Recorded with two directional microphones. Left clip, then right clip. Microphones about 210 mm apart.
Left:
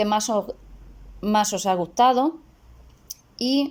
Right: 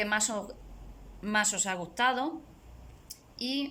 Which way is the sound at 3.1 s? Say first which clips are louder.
Left 10 dB; 30° left (ahead or behind).